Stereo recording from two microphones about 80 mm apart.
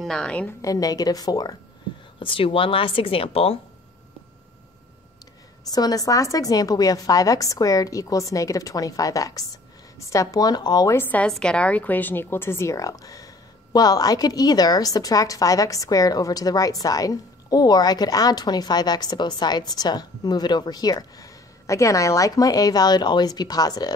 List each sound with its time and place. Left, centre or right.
0.0 s a woman's voice: centre
0.6 s a woman's voice: left
2.1 s speech: left
5.7 s a woman's voice: left
11.2 s a woman's voice: centre; by 23.9 s left